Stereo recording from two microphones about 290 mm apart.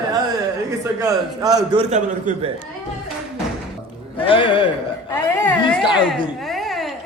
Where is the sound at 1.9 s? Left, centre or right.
Right.